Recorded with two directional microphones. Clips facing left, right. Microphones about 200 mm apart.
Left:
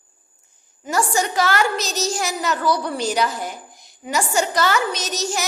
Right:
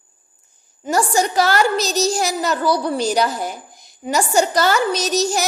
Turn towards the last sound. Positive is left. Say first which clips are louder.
# right 6 dB
turn(degrees=-35)  # may be behind; listen again after turning